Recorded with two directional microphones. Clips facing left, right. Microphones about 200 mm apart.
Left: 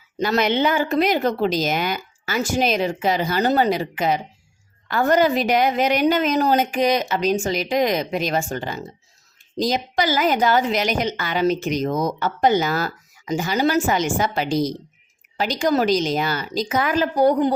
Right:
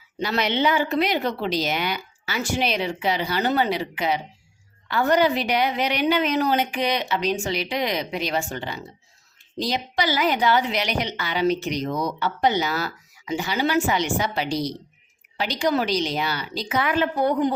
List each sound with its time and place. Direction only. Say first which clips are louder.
0.2 s a woman's voice: left 4 dB; 45° left (ahead or behind)